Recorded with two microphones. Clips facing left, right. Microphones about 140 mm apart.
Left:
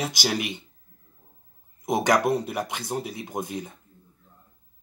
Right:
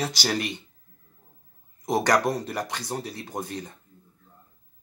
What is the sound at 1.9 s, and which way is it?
Speech, 15° left (ahead or behind).